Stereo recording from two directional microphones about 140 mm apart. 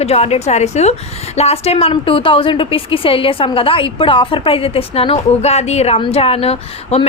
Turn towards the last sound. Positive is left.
turn(degrees=45)  # may be behind; listen again after turning